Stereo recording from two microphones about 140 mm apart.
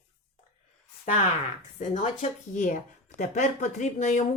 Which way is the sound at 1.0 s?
50° left (ahead or behind).